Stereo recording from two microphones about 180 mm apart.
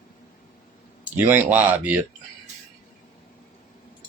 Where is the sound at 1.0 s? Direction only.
10° right (ahead or behind).